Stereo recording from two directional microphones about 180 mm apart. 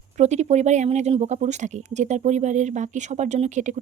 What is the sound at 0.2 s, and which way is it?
Speech, 40° right (ahead or behind).